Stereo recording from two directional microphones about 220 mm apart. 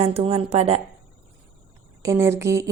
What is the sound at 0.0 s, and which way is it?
Speech, 25° right (ahead or behind).